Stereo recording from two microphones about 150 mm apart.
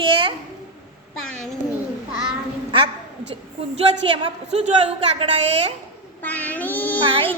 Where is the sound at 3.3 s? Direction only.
35° right (ahead or behind).